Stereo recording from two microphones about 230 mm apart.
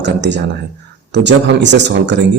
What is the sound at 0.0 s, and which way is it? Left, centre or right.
A man's voice, right.